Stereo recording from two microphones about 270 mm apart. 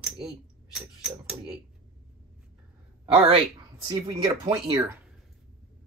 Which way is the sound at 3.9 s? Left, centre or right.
Centre.